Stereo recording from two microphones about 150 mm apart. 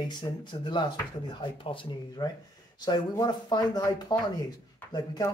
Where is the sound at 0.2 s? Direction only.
30° left (ahead or behind).